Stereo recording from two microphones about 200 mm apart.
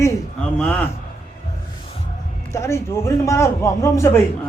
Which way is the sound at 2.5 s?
15° left (ahead or behind).